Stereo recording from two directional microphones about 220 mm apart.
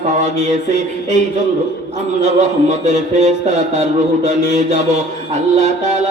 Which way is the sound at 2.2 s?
30° right (ahead or behind).